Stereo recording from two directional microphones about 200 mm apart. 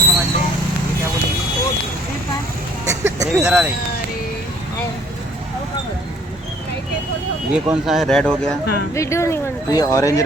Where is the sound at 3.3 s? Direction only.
5° right (ahead or behind).